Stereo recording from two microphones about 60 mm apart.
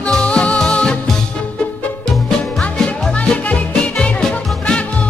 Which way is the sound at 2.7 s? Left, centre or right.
Centre.